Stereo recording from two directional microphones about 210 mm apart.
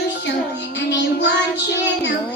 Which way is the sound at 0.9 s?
55° left (ahead or behind).